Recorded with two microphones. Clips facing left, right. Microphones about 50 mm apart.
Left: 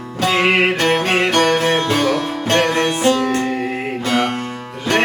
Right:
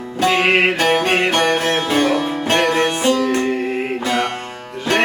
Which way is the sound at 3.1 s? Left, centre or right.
Left.